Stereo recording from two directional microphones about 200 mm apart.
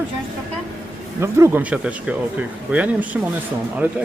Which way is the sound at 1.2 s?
10° right (ahead or behind).